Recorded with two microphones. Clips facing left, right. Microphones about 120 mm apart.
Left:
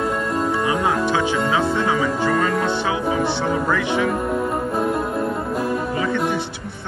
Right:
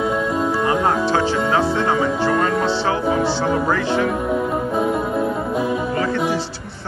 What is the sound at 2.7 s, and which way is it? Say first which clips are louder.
Music: right 2 dB; 15° left (ahead or behind).